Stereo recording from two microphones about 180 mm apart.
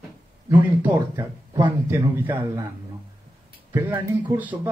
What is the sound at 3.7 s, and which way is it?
Speech, 15° right (ahead or behind).